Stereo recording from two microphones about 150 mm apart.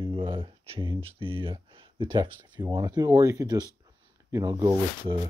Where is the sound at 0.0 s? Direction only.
35° right (ahead or behind).